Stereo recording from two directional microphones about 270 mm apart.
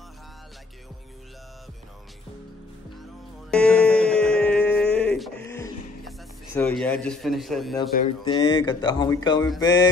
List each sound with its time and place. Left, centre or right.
3.4 s music: centre
4.9 s a sound: centre
6.5 s a man's voice: centre
8.2 s speech: centre